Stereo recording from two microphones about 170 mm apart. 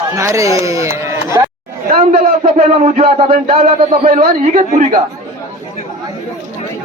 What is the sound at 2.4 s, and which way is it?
Speech, 35° right (ahead or behind).